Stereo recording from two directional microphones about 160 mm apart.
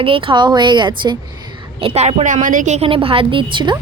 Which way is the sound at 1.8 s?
40° right (ahead or behind).